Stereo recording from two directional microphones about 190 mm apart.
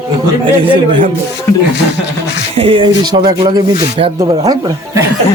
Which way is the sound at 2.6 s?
30° right (ahead or behind).